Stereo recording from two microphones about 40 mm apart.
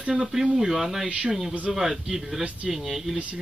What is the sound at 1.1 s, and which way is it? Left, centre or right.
Speech, right.